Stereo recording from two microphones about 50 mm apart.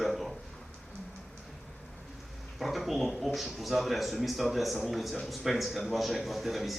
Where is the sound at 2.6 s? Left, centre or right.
Centre.